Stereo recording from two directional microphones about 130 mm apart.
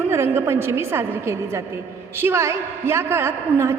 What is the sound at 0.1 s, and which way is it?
A woman's voice, 20° right (ahead or behind).